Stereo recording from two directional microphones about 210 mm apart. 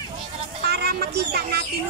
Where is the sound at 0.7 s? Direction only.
50° right (ahead or behind).